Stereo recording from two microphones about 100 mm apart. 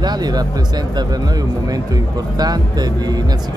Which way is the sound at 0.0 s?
45° right (ahead or behind).